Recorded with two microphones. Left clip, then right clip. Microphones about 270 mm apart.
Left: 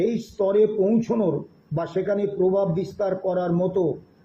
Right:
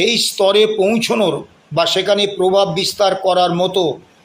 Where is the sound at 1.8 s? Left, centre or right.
Right.